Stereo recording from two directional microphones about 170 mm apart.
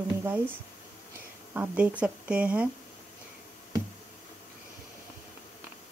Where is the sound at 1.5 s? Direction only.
10° right (ahead or behind).